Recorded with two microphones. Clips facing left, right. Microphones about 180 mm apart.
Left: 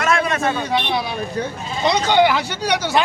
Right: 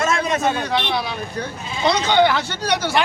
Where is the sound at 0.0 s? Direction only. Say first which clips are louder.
Even; 20° right (ahead or behind).